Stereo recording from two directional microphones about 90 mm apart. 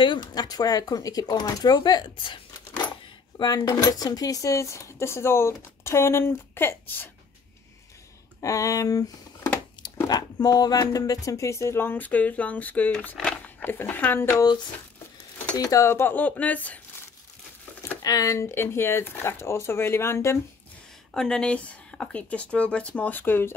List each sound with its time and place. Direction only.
0.0 s speech: 60° left (ahead or behind); by 7.1 s 25° left (ahead or behind)
8.4 s speech: 40° left (ahead or behind); by 14.2 s 20° left (ahead or behind)
15.5 s speech: 40° left (ahead or behind); by 16.8 s 15° left (ahead or behind)
18.0 s speech: 40° left (ahead or behind)
21.1 s speech: 5° left (ahead or behind); by 23.5 s 25° left (ahead or behind)